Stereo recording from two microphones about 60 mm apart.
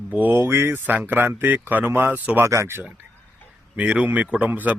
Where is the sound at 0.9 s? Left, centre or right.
Right.